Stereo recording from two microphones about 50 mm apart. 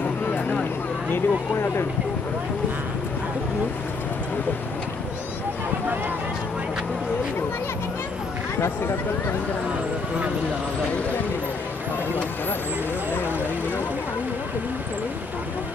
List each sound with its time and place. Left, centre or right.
1.1 s speech: left
8.5 s speech: left